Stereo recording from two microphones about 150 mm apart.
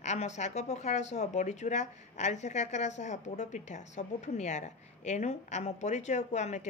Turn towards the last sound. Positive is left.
turn(degrees=50)  # may be behind; listen again after turning